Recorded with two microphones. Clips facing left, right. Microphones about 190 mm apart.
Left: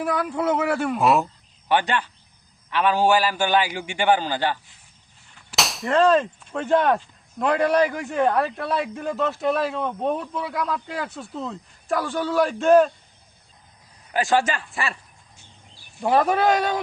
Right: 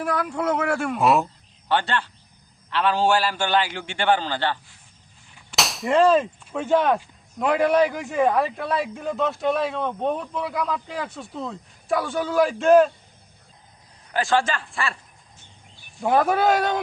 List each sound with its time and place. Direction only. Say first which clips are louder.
0.0 s speech: left 1 dB; centre (ahead or behind)
1.6 s a man's voice: left 2 dB; 15° left (ahead or behind)
5.5 s whip: right 1 dB; centre (ahead or behind)
6.0 s speech: even; 5° right (ahead or behind)
14.4 s a man's voice: even; 15° left (ahead or behind)
16.0 s speech: even; centre (ahead or behind)